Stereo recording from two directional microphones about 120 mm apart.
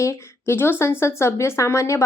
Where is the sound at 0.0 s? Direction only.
25° left (ahead or behind).